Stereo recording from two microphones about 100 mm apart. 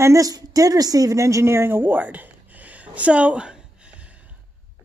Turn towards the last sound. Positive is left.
turn(degrees=-10)  # may be behind; listen again after turning